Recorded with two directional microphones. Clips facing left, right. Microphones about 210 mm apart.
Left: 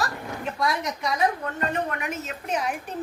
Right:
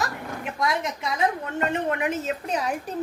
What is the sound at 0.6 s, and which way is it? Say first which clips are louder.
A woman's voice: right 1 dB; 25° right (ahead or behind).